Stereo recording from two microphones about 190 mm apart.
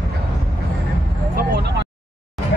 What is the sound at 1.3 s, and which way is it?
Vehicle, 65° right (ahead or behind).